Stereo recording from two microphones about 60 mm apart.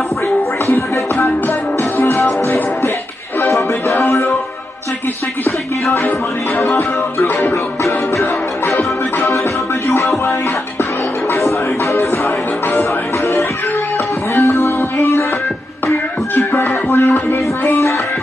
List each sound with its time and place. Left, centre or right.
2.0 s music: left
3.9 s music: left
8.2 s music: left
11.4 s music: left
14.3 s music: left
16.3 s music: left